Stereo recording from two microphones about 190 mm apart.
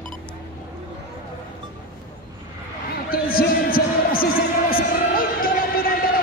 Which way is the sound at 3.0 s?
50° left (ahead or behind).